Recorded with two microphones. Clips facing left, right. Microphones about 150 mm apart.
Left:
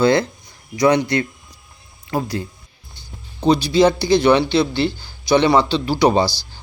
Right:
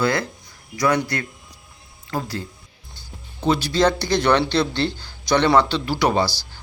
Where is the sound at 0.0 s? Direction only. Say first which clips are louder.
Left 6 dB; 25° left (ahead or behind).